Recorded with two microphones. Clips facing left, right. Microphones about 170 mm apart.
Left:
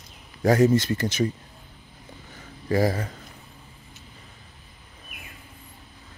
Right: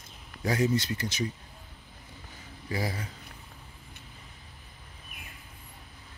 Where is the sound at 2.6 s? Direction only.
50° left (ahead or behind).